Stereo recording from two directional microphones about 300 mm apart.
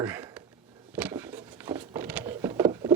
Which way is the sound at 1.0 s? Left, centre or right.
Centre.